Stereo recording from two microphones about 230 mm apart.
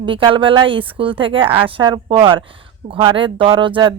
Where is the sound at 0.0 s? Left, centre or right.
Right.